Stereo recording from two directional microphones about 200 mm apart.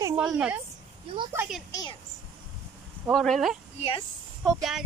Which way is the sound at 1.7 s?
20° left (ahead or behind).